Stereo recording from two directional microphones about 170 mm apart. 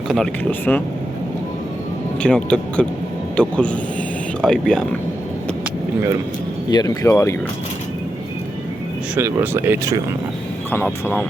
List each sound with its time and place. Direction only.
0.1 s speech: 5° left (ahead or behind)
2.2 s speech: 5° left (ahead or behind)
6.7 s speech: 25° left (ahead or behind)
9.1 s speech: 10° right (ahead or behind)